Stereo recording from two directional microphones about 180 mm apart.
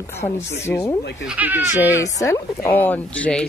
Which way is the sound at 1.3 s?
10° right (ahead or behind).